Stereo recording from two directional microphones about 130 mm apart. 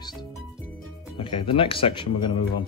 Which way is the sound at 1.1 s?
40° left (ahead or behind).